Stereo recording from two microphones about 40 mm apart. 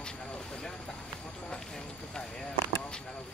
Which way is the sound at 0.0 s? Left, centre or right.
Left.